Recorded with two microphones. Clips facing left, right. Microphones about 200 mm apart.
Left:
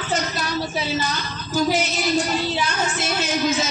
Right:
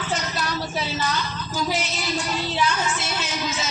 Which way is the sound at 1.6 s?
45° left (ahead or behind).